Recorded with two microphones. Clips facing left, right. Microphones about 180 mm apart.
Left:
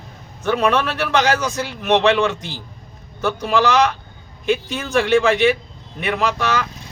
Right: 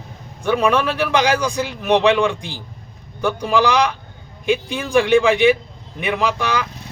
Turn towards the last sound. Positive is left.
turn(degrees=-15)  # may be behind; listen again after turning